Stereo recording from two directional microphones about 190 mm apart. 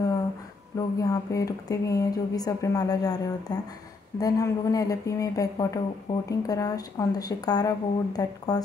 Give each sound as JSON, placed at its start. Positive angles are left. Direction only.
{"t": 0.7, "sound": "speech", "side_deg": 20}